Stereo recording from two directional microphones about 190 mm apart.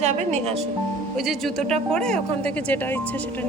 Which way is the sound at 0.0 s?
35° right (ahead or behind).